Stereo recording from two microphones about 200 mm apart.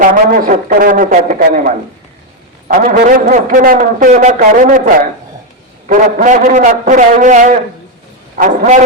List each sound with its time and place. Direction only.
0.0 s a man's voice: 45° right (ahead or behind)
5.9 s a man's voice: 40° right (ahead or behind)